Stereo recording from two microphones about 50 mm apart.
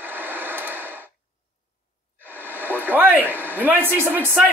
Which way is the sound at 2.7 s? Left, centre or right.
Right.